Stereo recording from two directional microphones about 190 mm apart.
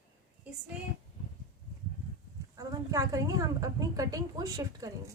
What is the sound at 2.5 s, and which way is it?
A woman's voice, 15° right (ahead or behind).